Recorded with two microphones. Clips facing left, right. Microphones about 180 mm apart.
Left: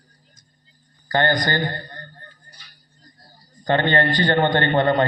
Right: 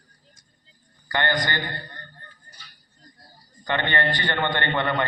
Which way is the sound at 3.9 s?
40° left (ahead or behind).